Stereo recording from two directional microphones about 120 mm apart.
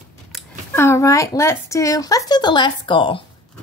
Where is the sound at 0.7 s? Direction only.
20° left (ahead or behind); by 3.2 s 40° left (ahead or behind).